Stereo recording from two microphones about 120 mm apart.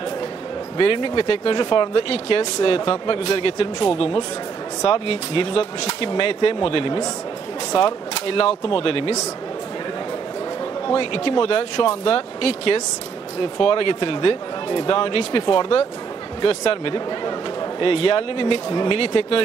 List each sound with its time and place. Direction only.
0.7 s speech: 45° left (ahead or behind)
10.9 s speech: 50° left (ahead or behind)